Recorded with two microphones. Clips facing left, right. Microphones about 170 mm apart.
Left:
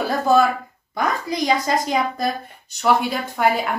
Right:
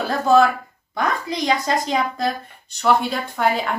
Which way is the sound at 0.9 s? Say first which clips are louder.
Left 1 dB; centre (ahead or behind).